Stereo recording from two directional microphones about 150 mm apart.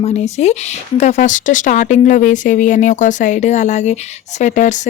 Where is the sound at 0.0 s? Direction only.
50° left (ahead or behind).